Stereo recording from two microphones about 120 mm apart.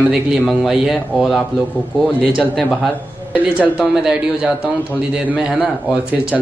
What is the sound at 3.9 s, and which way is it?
A man's voice, 5° right (ahead or behind).